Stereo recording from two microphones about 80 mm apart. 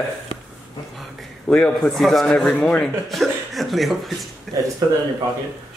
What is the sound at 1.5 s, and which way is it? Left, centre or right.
Speech, centre.